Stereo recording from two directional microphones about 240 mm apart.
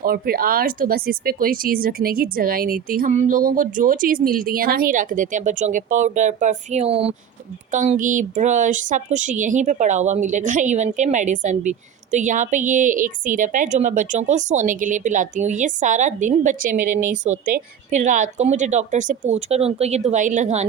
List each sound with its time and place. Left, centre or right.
0.0 s a woman's voice: right